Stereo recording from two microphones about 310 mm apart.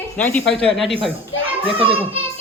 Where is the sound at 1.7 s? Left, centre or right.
Centre.